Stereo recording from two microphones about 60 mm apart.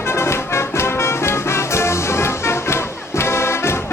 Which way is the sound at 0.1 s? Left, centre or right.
Left.